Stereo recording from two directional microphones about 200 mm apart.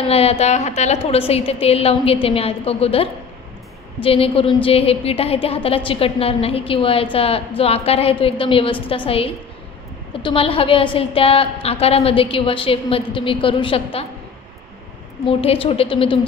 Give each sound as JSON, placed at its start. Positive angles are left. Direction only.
{"t": 0.0, "sound": "a woman's voice", "side_deg": 30}
{"t": 15.2, "sound": "a woman's voice", "side_deg": 25}